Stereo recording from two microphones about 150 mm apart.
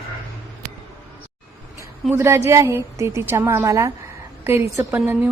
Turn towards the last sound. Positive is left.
turn(degrees=-10)  # may be behind; listen again after turning